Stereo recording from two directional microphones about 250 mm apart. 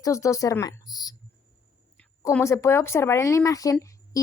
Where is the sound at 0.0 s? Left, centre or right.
Centre.